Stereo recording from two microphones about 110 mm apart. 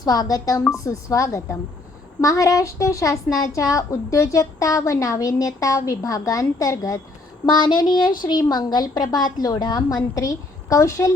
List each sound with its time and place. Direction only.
0.0 s a woman's voice: 35° left (ahead or behind)